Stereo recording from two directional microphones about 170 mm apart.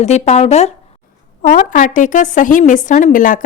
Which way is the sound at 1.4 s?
50° left (ahead or behind).